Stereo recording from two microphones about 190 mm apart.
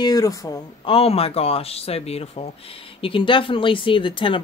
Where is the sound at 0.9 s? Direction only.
30° left (ahead or behind).